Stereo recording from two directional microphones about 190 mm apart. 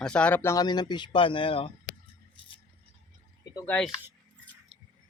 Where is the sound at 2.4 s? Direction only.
25° left (ahead or behind).